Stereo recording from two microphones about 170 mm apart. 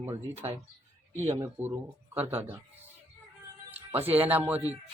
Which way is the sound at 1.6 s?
15° right (ahead or behind).